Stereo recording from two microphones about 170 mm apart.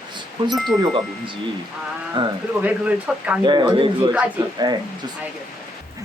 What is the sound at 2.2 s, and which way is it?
Speech, 30° right (ahead or behind).